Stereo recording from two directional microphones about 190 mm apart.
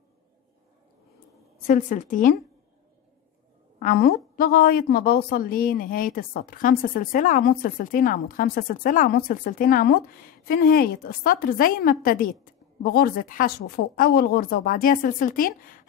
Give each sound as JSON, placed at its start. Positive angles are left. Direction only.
{"t": 1.7, "sound": "a woman's voice", "side_deg": 45}
{"t": 3.8, "sound": "a woman's voice", "side_deg": 45}